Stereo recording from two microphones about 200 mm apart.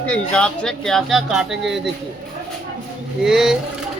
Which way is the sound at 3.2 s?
Centre (ahead or behind).